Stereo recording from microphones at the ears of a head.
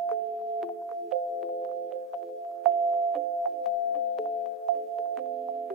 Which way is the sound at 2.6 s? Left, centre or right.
Right.